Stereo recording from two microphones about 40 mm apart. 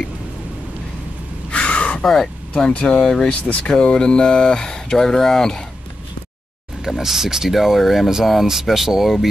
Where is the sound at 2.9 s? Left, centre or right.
Left.